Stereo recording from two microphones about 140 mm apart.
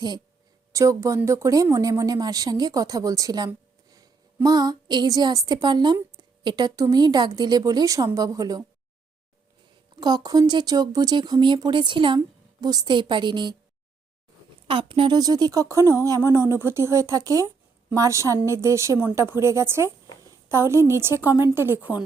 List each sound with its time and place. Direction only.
0.7 s speech: 20° right (ahead or behind)
9.9 s speech: 30° right (ahead or behind)
14.7 s a woman's voice: 40° right (ahead or behind); by 22.0 s 10° right (ahead or behind)